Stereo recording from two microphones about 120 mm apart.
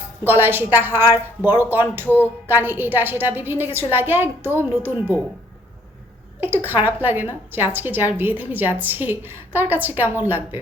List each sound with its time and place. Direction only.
0.3 s a woman's voice: 15° right (ahead or behind)
6.4 s a woman's voice: 15° right (ahead or behind)